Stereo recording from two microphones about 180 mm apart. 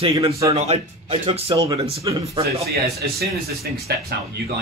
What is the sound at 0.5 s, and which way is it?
Speech, 35° right (ahead or behind).